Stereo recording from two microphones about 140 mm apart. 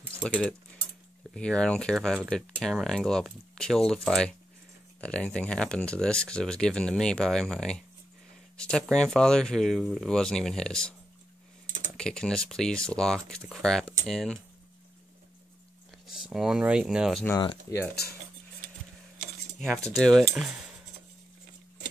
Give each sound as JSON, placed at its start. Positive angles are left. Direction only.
{"t": 0.2, "sound": "speech", "side_deg": 5}
{"t": 12.0, "sound": "speech", "side_deg": 5}
{"t": 16.3, "sound": "speech", "side_deg": -5}
{"t": 17.4, "sound": "speech", "side_deg": 30}
{"t": 19.6, "sound": "speech", "side_deg": 0}